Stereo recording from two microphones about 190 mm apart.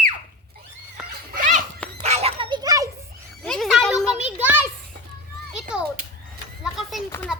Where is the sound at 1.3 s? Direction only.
45° right (ahead or behind).